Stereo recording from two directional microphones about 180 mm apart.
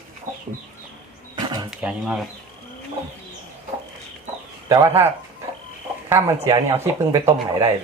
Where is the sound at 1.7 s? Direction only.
5° right (ahead or behind).